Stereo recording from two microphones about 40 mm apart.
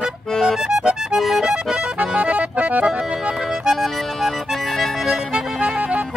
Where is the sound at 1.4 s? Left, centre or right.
Centre.